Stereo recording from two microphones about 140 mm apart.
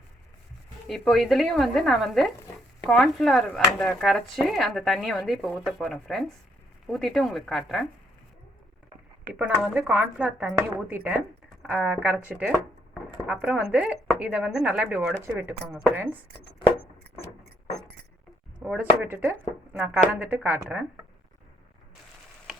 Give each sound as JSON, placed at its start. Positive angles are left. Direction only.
{"t": 0.9, "sound": "speech", "side_deg": 0}
{"t": 9.7, "sound": "speech", "side_deg": -10}
{"t": 18.6, "sound": "speech", "side_deg": -10}